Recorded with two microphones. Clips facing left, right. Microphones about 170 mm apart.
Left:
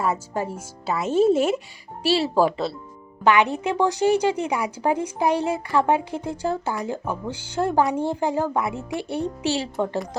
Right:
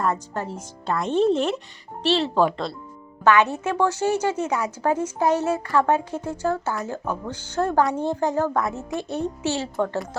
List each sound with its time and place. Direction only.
0.0 s speech: 10° left (ahead or behind)